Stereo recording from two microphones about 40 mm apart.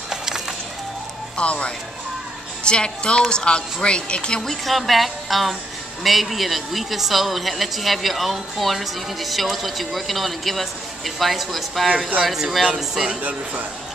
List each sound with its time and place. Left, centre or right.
0.1 s music: centre
1.3 s speech: left
4.4 s a woman's voice: centre